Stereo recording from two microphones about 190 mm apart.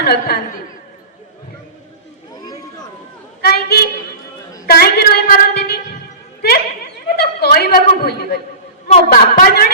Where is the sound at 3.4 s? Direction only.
55° left (ahead or behind).